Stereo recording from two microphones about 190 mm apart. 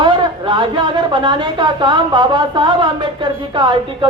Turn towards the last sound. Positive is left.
turn(degrees=-25)  # may be behind; listen again after turning